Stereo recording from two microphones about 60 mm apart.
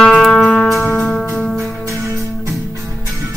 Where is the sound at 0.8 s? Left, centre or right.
Left.